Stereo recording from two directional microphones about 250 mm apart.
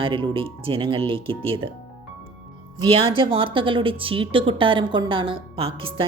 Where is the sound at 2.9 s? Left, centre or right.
Right.